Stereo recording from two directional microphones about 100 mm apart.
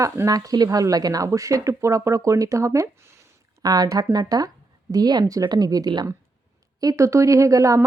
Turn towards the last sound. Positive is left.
turn(degrees=-35)  # may be behind; listen again after turning